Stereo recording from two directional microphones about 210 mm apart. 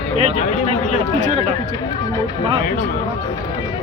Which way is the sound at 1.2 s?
35° right (ahead or behind).